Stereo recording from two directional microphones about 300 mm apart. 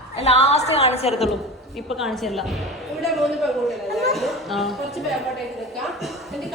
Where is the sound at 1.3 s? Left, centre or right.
Centre.